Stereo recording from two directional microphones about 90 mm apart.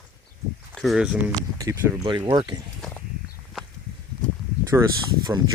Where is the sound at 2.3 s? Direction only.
50° right (ahead or behind).